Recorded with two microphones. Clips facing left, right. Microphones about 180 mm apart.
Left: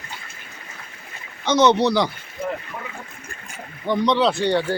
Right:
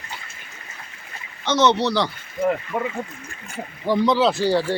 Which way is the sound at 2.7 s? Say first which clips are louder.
Right 10 dB; 70° right (ahead or behind).